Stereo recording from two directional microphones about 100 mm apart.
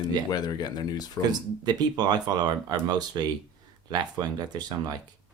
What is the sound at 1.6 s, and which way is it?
Speech, 45° right (ahead or behind).